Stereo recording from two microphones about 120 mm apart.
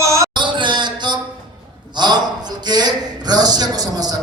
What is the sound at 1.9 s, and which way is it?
A man's voice, 35° right (ahead or behind).